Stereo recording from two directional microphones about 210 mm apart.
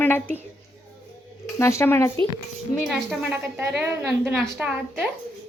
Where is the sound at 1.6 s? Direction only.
15° left (ahead or behind).